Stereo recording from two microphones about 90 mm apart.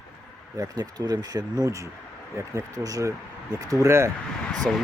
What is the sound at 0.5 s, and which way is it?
Speech, 45° right (ahead or behind).